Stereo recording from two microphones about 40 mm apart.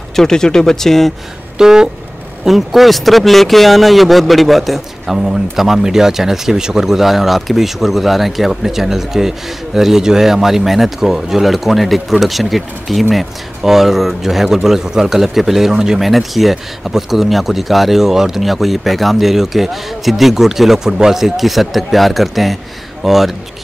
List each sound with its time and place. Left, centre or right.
0.1 s speech: centre
1.6 s speech: centre
2.4 s speech: centre
16.0 s speech: centre